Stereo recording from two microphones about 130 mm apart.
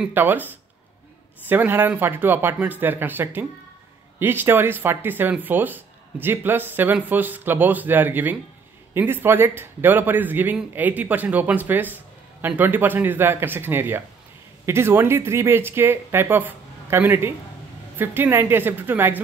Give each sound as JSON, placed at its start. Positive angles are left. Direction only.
{"t": 0.0, "sound": "a man's voice", "side_deg": -15}